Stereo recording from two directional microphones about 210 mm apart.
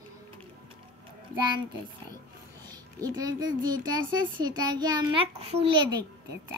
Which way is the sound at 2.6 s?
20° right (ahead or behind).